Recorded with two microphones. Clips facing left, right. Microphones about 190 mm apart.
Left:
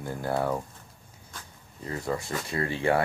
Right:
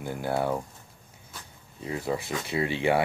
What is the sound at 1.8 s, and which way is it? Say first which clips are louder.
Speech: right 1 dB; 10° right (ahead or behind).